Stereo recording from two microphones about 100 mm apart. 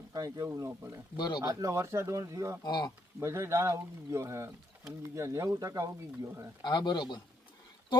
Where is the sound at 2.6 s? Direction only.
45° left (ahead or behind).